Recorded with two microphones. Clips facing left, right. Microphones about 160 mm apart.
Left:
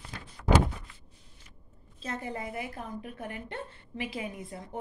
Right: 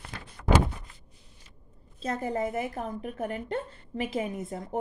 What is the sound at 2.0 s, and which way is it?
A woman's voice, 40° right (ahead or behind).